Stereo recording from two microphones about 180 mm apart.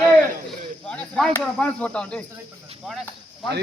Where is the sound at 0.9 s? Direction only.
5° left (ahead or behind).